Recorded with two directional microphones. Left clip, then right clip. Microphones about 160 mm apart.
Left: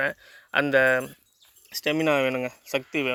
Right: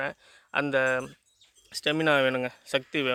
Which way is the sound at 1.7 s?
10° right (ahead or behind).